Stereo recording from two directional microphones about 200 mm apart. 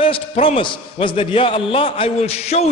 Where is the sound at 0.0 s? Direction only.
30° left (ahead or behind).